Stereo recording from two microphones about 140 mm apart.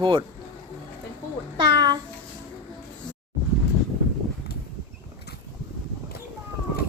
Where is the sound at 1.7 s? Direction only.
30° right (ahead or behind).